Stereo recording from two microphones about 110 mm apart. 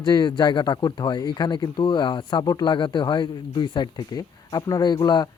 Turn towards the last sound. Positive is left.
turn(degrees=40)  # may be behind; listen again after turning